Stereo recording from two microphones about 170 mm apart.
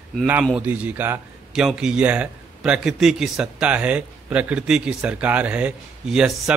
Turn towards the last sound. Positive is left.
turn(degrees=-5)  # may be behind; listen again after turning